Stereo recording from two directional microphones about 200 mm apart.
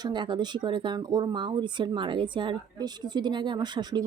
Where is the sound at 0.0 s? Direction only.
25° right (ahead or behind).